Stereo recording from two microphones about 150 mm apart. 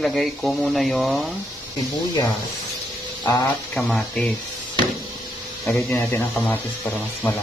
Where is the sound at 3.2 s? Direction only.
20° left (ahead or behind).